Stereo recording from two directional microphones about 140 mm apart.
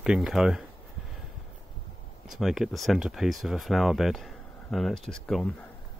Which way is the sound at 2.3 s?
Centre (ahead or behind).